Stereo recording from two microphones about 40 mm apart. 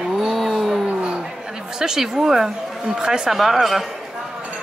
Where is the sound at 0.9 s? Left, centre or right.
Right.